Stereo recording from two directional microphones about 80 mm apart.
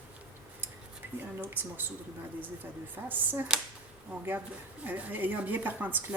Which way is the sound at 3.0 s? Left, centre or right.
Right.